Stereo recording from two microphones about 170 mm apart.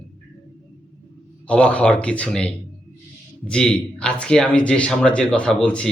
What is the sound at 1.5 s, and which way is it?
A man's voice, 5° left (ahead or behind).